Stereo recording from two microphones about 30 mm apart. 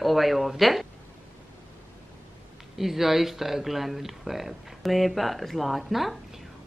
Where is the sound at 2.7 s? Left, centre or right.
Centre.